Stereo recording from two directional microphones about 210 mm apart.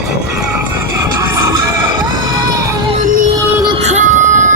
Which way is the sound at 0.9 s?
15° right (ahead or behind).